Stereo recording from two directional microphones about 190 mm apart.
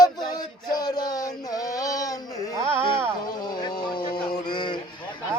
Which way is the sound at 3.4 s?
20° left (ahead or behind).